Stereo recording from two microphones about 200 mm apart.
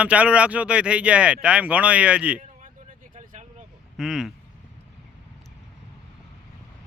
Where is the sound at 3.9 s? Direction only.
Centre (ahead or behind).